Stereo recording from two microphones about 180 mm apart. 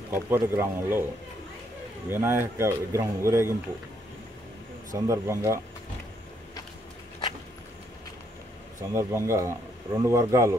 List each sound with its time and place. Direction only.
0.1 s a man's voice: 15° right (ahead or behind)
2.0 s a man's voice: 10° right (ahead or behind)
4.9 s a man's voice: 15° right (ahead or behind)
8.9 s a man's voice: 15° right (ahead or behind)